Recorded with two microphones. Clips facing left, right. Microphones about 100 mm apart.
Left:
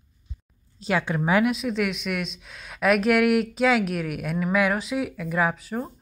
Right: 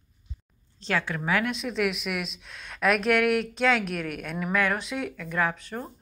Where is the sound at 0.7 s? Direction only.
15° left (ahead or behind).